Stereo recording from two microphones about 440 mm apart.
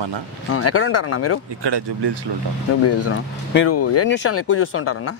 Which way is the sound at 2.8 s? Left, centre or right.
Left.